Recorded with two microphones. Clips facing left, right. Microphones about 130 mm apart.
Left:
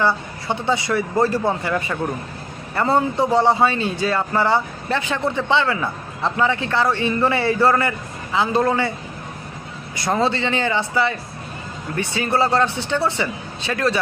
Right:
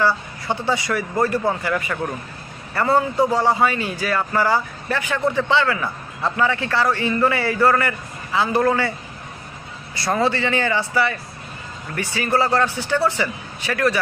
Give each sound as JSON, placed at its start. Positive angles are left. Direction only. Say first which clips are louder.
{"t": 0.0, "sound": "a man's voice", "louder": "even", "side_deg": 20}
{"t": 9.9, "sound": "a man's voice", "louder": "even", "side_deg": 15}